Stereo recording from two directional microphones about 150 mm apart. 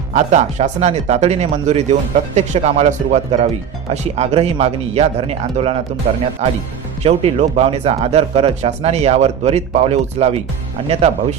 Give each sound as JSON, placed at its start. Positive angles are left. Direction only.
{"t": 0.1, "sound": "speech", "side_deg": -55}